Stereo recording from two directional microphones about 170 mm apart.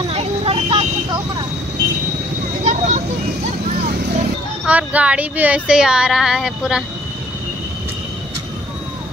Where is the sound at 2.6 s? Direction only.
45° right (ahead or behind).